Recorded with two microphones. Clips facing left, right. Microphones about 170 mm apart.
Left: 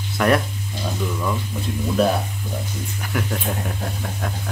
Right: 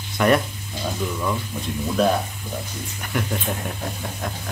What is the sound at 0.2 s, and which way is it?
Speech, centre (ahead or behind).